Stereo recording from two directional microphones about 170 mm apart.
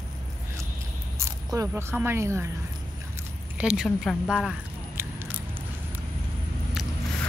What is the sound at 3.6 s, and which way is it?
Speech, 5° right (ahead or behind).